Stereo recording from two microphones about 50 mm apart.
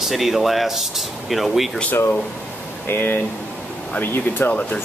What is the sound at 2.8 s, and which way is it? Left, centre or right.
Speech, left.